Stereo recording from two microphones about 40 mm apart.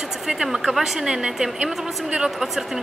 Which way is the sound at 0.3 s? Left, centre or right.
Centre.